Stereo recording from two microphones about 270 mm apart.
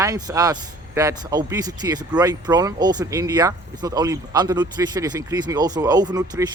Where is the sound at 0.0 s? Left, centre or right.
Centre.